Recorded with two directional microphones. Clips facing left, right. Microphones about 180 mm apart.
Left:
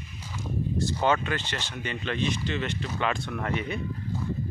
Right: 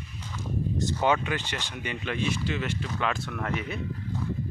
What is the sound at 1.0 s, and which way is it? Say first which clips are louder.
Speech: even; 15° right (ahead or behind).